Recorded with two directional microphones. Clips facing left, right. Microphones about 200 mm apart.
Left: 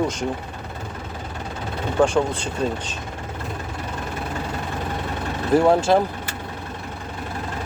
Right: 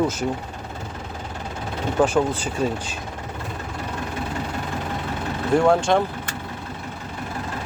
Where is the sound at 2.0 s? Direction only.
5° right (ahead or behind).